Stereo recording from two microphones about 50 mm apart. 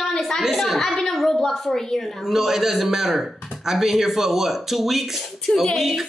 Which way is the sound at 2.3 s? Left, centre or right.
Centre.